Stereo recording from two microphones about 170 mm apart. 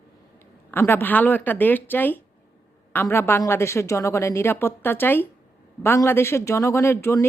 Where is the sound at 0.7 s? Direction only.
15° left (ahead or behind).